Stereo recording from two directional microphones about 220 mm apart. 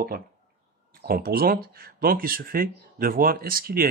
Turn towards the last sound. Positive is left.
turn(degrees=-40)  # may be behind; listen again after turning